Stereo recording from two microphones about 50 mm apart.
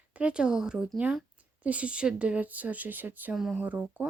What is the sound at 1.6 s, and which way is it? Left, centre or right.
Speech, right.